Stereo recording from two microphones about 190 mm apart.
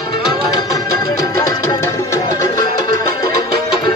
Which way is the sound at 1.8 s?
15° left (ahead or behind).